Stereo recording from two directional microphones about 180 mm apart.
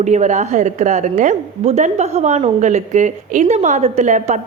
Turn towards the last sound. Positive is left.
turn(degrees=-40)  # may be behind; listen again after turning